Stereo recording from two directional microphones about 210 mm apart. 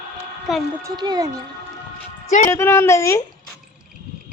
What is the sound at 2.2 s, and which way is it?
Speech, 35° left (ahead or behind).